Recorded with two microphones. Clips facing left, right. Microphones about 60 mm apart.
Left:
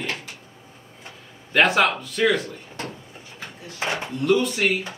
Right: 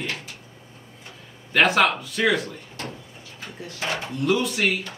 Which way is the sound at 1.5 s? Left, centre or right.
Centre.